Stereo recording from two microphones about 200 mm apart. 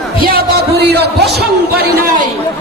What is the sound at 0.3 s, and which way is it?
Speech, 55° right (ahead or behind).